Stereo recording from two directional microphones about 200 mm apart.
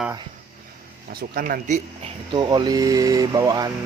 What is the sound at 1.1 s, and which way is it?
Speech, 50° right (ahead or behind).